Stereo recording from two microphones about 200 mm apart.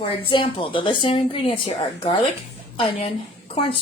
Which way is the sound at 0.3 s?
25° left (ahead or behind).